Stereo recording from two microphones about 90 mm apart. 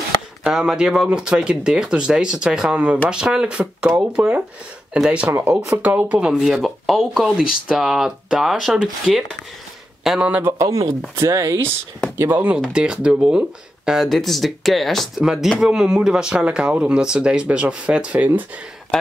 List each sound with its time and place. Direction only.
0.4 s speech: 5° right (ahead or behind)
6.4 s speech: centre (ahead or behind)
10.6 s speech: 40° right (ahead or behind)
12.2 s speech: 25° right (ahead or behind)
12.7 s speech: 10° right (ahead or behind)